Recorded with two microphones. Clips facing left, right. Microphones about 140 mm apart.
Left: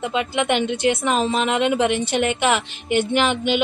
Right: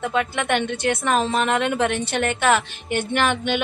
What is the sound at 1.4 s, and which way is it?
Speech, 10° left (ahead or behind).